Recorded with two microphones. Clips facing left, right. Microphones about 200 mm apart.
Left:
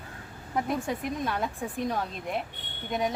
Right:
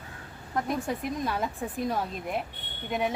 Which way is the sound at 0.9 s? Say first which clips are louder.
Even; centre (ahead or behind).